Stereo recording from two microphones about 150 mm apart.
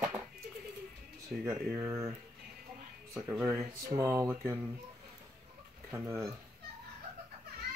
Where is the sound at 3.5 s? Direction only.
15° right (ahead or behind).